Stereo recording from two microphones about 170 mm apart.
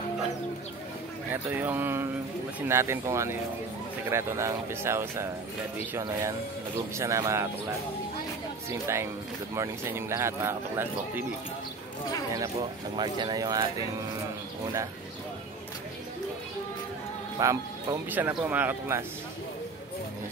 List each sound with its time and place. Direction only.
1.3 s speech: 10° right (ahead or behind)
8.6 s speech: 15° right (ahead or behind)
12.9 s speech: 25° right (ahead or behind)
17.4 s speech: 20° right (ahead or behind)